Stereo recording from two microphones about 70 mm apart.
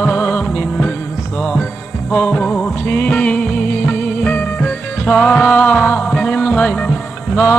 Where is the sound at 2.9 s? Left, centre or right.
Left.